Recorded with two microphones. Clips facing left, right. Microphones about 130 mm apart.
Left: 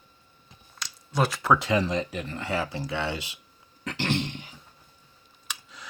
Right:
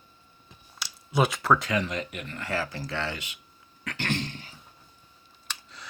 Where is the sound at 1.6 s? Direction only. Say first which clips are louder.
Left 4 dB; 30° left (ahead or behind).